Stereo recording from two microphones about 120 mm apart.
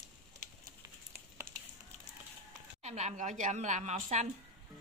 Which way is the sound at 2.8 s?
75° right (ahead or behind).